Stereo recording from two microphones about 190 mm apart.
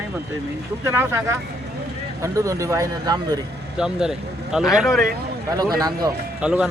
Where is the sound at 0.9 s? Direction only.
10° right (ahead or behind).